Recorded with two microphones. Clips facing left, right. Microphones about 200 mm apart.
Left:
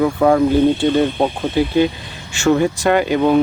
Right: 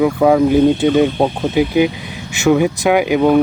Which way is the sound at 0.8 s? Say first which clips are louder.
Right 2 dB; 15° right (ahead or behind).